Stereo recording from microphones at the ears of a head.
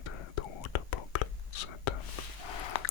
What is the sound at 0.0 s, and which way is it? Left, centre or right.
Whispering, left.